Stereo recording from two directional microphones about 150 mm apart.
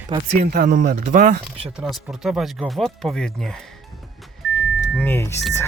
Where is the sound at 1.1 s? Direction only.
55° right (ahead or behind).